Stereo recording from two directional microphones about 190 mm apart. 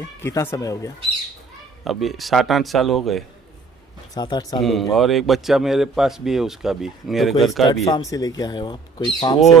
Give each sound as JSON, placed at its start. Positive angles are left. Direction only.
{"t": 0.2, "sound": "speech", "side_deg": 15}
{"t": 1.9, "sound": "a man's voice", "side_deg": 0}
{"t": 4.1, "sound": "speech", "side_deg": 20}
{"t": 4.6, "sound": "a man's voice", "side_deg": 0}
{"t": 7.8, "sound": "speech", "side_deg": 15}